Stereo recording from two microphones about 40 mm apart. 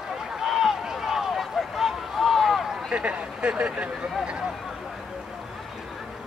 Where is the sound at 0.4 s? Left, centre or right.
Centre.